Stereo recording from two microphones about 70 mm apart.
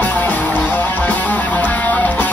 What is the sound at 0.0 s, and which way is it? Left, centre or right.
Music, left.